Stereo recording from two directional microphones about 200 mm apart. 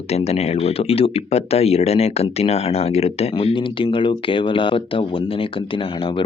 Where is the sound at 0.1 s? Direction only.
30° left (ahead or behind).